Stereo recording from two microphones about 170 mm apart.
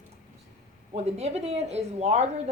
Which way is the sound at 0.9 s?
40° right (ahead or behind).